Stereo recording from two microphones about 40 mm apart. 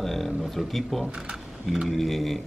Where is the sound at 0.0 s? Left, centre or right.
Centre.